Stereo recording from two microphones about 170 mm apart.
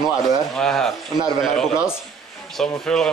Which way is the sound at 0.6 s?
5° left (ahead or behind).